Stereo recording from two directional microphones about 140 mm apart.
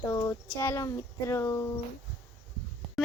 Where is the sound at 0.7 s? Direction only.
20° left (ahead or behind).